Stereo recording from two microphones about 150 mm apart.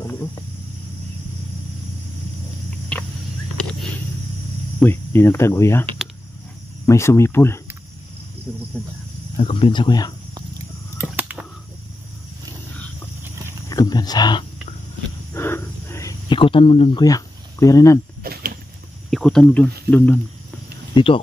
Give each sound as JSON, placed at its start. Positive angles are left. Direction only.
{"t": 0.0, "sound": "cricket", "side_deg": 20}
{"t": 4.7, "sound": "cricket", "side_deg": 15}
{"t": 6.9, "sound": "speech", "side_deg": 20}
{"t": 8.5, "sound": "speech", "side_deg": -5}
{"t": 9.4, "sound": "speech", "side_deg": 35}
{"t": 11.1, "sound": "a sound", "side_deg": -10}
{"t": 13.7, "sound": "speech", "side_deg": 25}
{"t": 15.3, "sound": "wild animals", "side_deg": 15}
{"t": 16.3, "sound": "speech", "side_deg": 35}
{"t": 17.0, "sound": "speech", "side_deg": 25}
{"t": 18.2, "sound": "rowboat", "side_deg": -85}
{"t": 19.0, "sound": "speech", "side_deg": 5}
{"t": 20.9, "sound": "speech", "side_deg": 35}